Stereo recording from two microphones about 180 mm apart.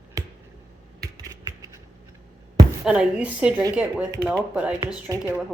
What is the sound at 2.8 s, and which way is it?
A woman's voice, 5° right (ahead or behind).